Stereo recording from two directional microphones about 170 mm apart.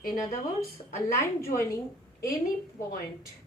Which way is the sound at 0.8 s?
35° left (ahead or behind).